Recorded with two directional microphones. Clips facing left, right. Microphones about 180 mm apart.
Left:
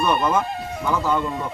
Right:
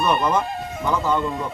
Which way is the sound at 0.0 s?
10° left (ahead or behind).